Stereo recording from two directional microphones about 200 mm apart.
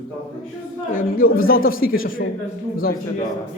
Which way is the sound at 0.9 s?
45° left (ahead or behind).